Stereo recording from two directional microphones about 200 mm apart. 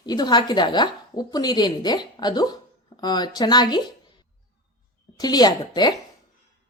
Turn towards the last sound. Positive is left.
turn(degrees=20)  # may be behind; listen again after turning